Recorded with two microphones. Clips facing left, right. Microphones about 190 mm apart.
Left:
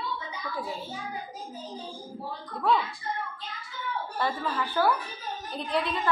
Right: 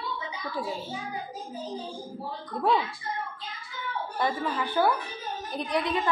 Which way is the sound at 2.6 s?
20° right (ahead or behind).